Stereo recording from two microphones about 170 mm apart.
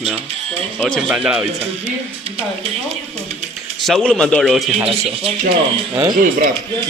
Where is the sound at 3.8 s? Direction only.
Centre (ahead or behind).